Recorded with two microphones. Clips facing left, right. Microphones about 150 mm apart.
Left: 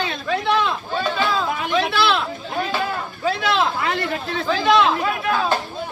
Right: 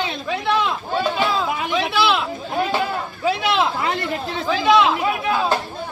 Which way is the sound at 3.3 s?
10° right (ahead or behind).